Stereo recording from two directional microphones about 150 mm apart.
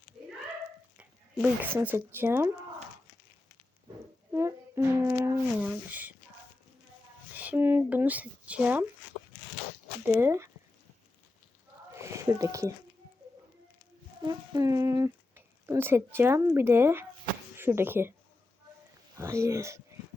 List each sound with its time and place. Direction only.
0.9 s a sound: 10° right (ahead or behind)
2.1 s speech: 15° right (ahead or behind)
4.3 s brass instrument: 20° right (ahead or behind)
5.6 s speech: 10° right (ahead or behind)
7.3 s speech: 10° right (ahead or behind)
10.1 s speech: 15° right (ahead or behind)
11.9 s a sound: 20° right (ahead or behind)
14.3 s speech: 25° right (ahead or behind)
19.1 s speech: 20° right (ahead or behind)